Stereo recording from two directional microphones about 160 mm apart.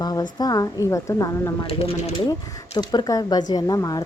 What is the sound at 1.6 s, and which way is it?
Speech, 35° left (ahead or behind).